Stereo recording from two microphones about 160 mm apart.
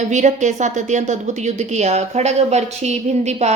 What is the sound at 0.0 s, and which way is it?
A woman's voice, 45° right (ahead or behind).